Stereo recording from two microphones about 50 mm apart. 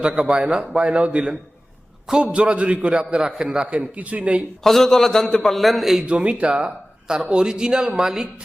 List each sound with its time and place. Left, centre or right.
0.0 s a man's voice: centre
4.6 s a man's voice: centre
6.1 s speech: right